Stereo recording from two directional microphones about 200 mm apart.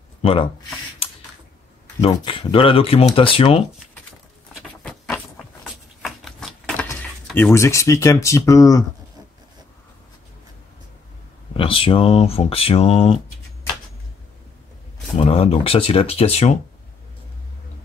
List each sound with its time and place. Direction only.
0.2 s speech: 30° left (ahead or behind)
1.0 s a sound: 30° left (ahead or behind)
2.0 s speech: 30° left (ahead or behind)
4.6 s a sound: 5° left (ahead or behind)
7.2 s speech: 10° left (ahead or behind)
11.5 s speech: 25° left (ahead or behind)
15.1 s speech: 30° left (ahead or behind)